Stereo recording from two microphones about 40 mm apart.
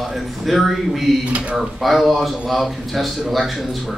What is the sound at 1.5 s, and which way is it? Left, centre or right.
A man's voice, centre.